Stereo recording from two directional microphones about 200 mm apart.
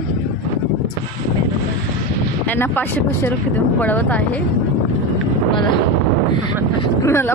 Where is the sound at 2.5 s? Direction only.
10° left (ahead or behind).